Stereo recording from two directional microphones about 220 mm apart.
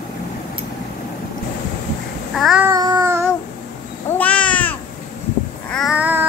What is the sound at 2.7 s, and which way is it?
Child singing, 15° right (ahead or behind).